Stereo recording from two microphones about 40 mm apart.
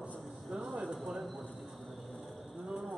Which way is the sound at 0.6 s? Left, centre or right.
Centre.